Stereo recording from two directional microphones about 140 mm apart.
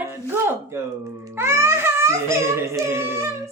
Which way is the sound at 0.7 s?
20° right (ahead or behind).